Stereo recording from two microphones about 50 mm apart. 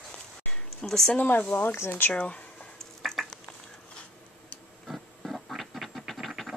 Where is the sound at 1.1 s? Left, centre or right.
Left.